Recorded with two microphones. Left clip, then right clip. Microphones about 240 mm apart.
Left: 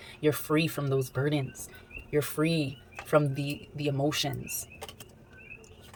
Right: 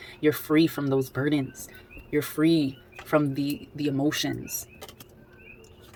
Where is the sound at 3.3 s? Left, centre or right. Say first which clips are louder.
Right 6 dB; centre.